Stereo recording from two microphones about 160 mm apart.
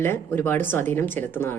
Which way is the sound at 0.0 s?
15° left (ahead or behind).